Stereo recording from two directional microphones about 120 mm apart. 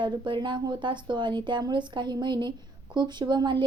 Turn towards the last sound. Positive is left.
turn(degrees=-35)  # may be behind; listen again after turning